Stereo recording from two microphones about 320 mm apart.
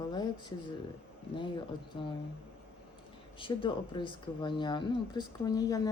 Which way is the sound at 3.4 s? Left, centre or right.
Centre.